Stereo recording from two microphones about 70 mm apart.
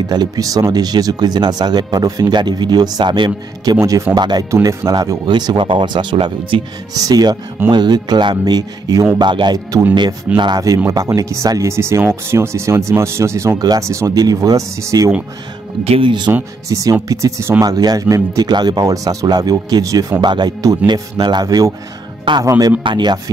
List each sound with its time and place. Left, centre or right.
0.1 s a man's voice: right
4.6 s speech: right
5.3 s speech: right
6.9 s speech: right
7.7 s a man's voice: right
9.2 s a man's voice: right
11.1 s speech: right
16.3 s speech: right
16.6 s speech: right
17.6 s speech: right
18.0 s speech: right
20.2 s speech: right
22.6 s speech: right